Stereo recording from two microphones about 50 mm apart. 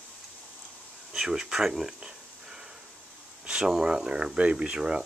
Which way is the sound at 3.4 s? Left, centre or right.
Centre.